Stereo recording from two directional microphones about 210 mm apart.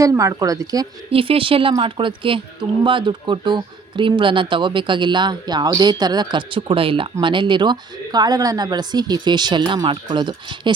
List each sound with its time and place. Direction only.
0.0 s speech: 15° right (ahead or behind)